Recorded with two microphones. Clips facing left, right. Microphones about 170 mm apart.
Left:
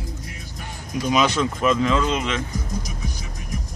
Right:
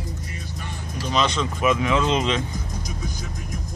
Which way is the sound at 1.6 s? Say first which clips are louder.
Even; 15° right (ahead or behind).